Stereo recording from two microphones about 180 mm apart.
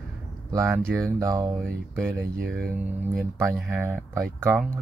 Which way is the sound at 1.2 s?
20° right (ahead or behind).